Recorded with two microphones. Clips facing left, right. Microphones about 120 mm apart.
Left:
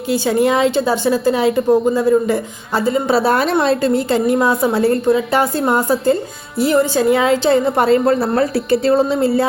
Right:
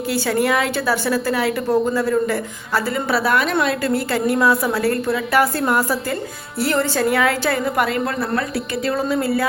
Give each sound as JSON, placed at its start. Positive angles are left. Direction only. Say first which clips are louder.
{"t": 0.1, "sound": "a woman's voice", "louder": "left 5 dB", "side_deg": 20}